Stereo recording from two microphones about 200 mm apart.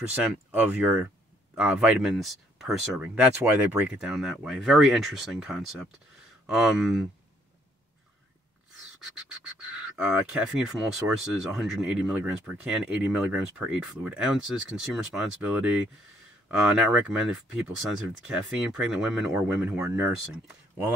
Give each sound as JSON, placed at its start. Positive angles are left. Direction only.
{"t": 0.1, "sound": "speech", "side_deg": -5}
{"t": 9.7, "sound": "speech", "side_deg": -5}